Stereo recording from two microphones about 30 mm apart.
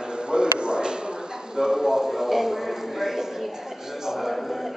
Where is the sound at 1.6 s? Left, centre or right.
Centre.